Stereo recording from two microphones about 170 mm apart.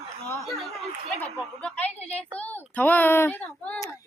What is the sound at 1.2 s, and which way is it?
A child's voice, 10° left (ahead or behind).